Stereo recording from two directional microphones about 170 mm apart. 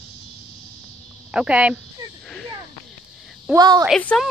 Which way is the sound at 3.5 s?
20° right (ahead or behind).